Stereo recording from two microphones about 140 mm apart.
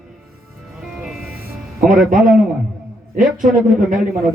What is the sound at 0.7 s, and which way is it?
Music, 5° right (ahead or behind).